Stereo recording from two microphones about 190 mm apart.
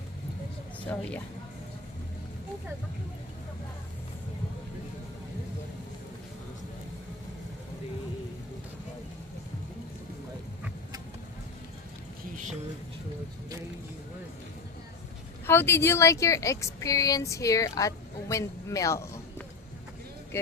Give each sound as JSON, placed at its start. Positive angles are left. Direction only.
{"t": 0.9, "sound": "a woman's voice", "side_deg": 10}
{"t": 15.4, "sound": "speech", "side_deg": 10}